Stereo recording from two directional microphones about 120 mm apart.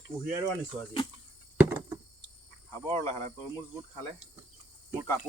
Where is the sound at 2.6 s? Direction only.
25° left (ahead or behind).